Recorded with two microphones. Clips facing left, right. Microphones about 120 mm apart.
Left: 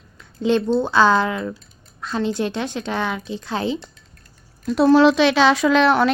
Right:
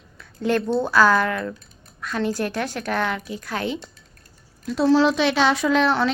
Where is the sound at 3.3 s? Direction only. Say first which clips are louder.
Left 3 dB; 25° left (ahead or behind).